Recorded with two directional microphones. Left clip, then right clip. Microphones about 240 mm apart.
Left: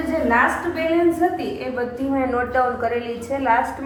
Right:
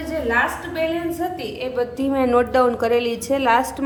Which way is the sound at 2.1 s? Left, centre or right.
Right.